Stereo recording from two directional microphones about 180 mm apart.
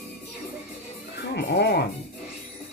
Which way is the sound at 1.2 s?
70° left (ahead or behind).